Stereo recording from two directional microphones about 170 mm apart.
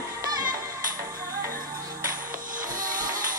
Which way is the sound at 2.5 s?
55° right (ahead or behind).